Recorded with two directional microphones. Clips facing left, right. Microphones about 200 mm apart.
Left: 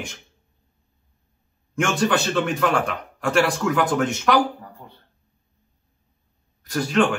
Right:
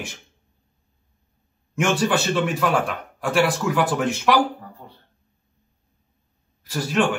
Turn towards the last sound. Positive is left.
turn(degrees=-5)  # may be behind; listen again after turning